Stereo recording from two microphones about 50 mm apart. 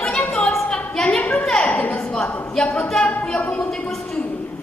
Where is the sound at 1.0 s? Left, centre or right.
Left.